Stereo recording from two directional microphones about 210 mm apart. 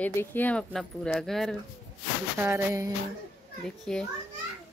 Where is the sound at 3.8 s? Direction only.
5° left (ahead or behind).